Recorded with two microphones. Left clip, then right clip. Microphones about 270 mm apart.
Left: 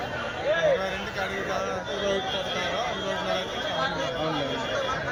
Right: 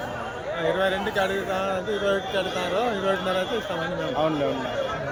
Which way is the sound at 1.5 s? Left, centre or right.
Right.